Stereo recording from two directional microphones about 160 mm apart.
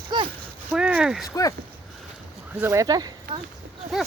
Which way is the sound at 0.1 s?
25° right (ahead or behind).